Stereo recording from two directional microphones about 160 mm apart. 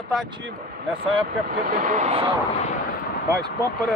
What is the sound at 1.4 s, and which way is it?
Speech, 60° right (ahead or behind).